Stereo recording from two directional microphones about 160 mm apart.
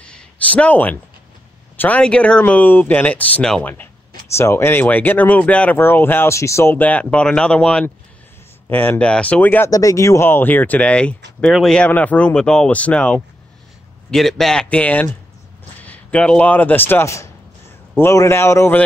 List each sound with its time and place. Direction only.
0.0 s a sound: 10° left (ahead or behind)
1.8 s speech: 10° left (ahead or behind)
9.7 s a man's voice: 20° left (ahead or behind)